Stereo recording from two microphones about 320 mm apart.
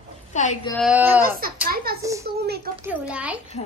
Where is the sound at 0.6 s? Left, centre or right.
Centre.